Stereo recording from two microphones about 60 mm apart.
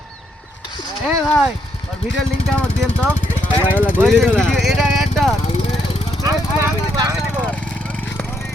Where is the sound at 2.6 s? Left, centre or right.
Left.